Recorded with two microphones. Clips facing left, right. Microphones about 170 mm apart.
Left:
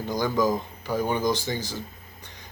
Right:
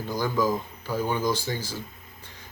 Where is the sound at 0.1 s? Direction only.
45° left (ahead or behind).